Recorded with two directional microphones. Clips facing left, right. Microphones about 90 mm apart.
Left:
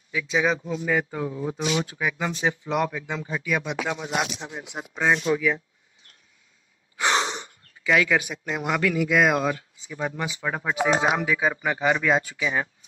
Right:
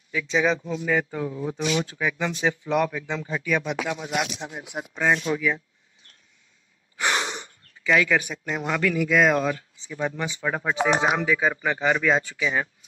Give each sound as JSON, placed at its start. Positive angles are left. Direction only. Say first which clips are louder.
{"t": 0.1, "sound": "speech", "louder": "right 1 dB", "side_deg": 5}
{"t": 0.8, "sound": "speech", "louder": "right 1 dB", "side_deg": 30}
{"t": 1.3, "sound": "a man's voice", "louder": "even", "side_deg": 10}
{"t": 1.6, "sound": "speech", "louder": "right 1 dB", "side_deg": 30}
{"t": 1.9, "sound": "a man's voice", "louder": "right 1 dB", "side_deg": 15}
{"t": 3.9, "sound": "speech", "louder": "even", "side_deg": 35}
{"t": 7.0, "sound": "a sound", "louder": "left 2 dB", "side_deg": 25}
{"t": 7.8, "sound": "a man's voice", "louder": "even", "side_deg": 15}